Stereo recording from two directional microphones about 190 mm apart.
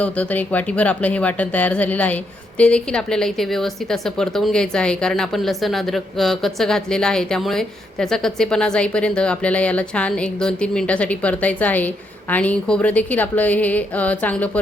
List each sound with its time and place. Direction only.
0.0 s a woman's voice: 10° left (ahead or behind)